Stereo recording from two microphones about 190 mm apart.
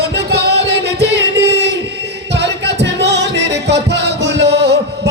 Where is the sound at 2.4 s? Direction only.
65° right (ahead or behind).